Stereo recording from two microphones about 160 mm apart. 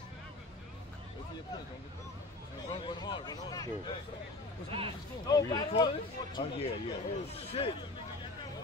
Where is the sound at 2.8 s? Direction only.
30° left (ahead or behind).